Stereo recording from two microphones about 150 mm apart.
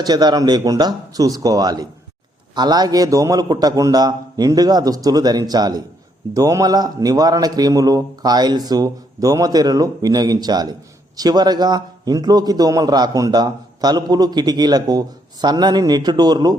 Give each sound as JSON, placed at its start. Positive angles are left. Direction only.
{"t": 0.0, "sound": "a man's voice", "side_deg": -25}